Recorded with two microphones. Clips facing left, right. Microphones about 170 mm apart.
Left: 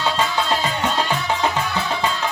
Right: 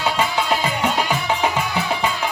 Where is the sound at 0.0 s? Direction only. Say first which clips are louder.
Even; 15° right (ahead or behind).